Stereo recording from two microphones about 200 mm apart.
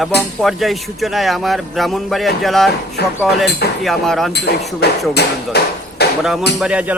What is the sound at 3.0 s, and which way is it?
Speech, 55° left (ahead or behind).